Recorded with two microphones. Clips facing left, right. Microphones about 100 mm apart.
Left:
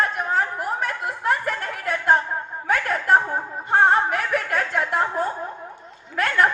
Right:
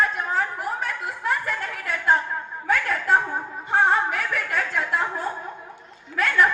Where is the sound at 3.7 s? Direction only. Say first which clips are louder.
Left 3 dB; 50° left (ahead or behind).